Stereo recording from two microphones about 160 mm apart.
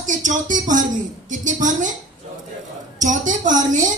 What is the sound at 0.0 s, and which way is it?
A woman's voice, 50° right (ahead or behind).